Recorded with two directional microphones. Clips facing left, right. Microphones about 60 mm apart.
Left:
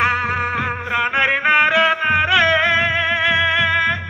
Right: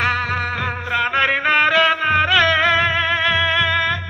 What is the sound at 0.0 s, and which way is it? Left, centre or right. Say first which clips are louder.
Music: left 2 dB; centre.